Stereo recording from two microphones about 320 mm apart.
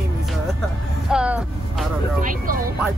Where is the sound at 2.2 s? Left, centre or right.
Right.